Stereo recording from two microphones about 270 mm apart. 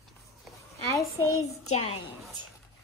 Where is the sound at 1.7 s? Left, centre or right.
Left.